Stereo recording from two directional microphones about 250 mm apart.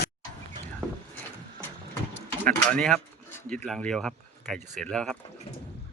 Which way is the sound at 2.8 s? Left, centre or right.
Centre.